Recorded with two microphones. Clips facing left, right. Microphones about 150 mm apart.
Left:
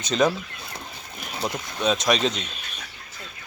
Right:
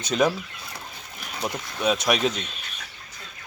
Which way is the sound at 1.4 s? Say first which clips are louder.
Even; 10° right (ahead or behind).